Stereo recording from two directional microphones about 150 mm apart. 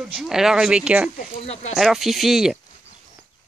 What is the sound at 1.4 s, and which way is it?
Speech, 45° left (ahead or behind).